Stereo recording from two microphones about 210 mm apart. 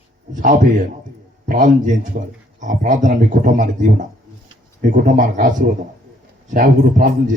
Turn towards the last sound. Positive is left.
turn(degrees=-40)  # may be behind; listen again after turning